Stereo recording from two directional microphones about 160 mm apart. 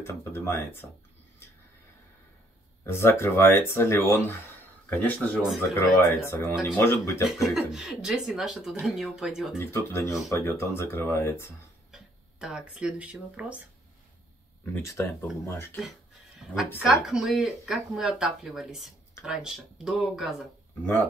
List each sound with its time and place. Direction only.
0.0 s speech: 15° left (ahead or behind)
2.8 s speech: 15° left (ahead or behind)
7.2 s speech: centre (ahead or behind)
9.6 s speech: 15° left (ahead or behind)
11.9 s speech: 5° right (ahead or behind)
14.6 s speech: 15° left (ahead or behind)
16.7 s speech: 5° right (ahead or behind)